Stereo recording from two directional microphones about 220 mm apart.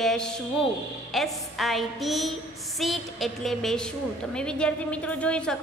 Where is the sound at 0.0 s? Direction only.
Centre (ahead or behind).